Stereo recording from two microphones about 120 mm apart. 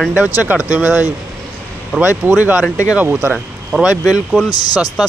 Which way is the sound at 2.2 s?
15° right (ahead or behind).